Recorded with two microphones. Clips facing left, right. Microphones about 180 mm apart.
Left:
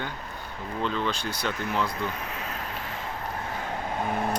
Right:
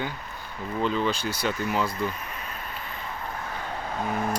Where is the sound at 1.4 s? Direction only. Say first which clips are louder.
Right 2 dB; 5° right (ahead or behind).